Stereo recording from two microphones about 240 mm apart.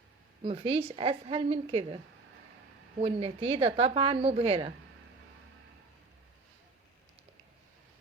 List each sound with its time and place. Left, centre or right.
0.4 s a woman's voice: right
3.0 s a woman's voice: right